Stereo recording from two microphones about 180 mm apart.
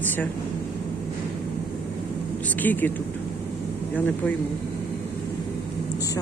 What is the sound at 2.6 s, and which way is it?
Speech, 10° left (ahead or behind).